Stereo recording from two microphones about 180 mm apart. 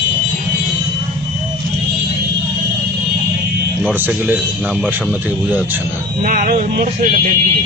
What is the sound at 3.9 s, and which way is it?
Speech, 10° right (ahead or behind).